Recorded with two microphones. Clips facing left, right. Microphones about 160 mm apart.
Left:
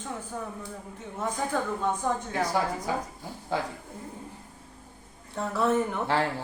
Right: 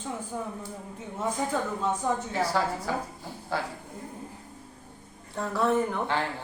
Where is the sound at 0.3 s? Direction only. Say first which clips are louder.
Right 2 dB; 10° right (ahead or behind).